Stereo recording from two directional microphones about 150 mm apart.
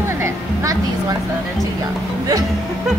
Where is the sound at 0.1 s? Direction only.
20° right (ahead or behind).